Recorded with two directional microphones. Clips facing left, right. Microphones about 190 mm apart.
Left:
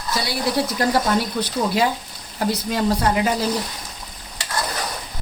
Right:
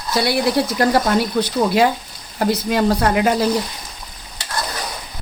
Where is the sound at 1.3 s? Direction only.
65° right (ahead or behind).